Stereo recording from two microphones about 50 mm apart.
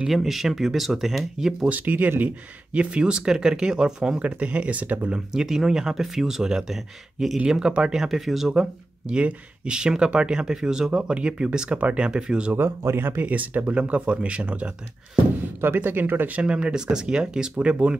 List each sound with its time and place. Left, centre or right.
0.1 s speech: centre
1.7 s speech: right
2.7 s speech: right
4.2 s speech: right
5.1 s speech: centre
9.0 s speech: centre
12.5 s speech: right
13.2 s speech: right
15.6 s speech: right
16.3 s speech: right